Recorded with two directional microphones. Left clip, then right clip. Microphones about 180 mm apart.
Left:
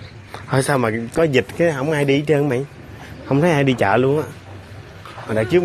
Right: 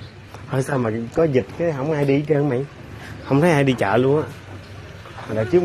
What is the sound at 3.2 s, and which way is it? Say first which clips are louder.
Speech: even; centre (ahead or behind).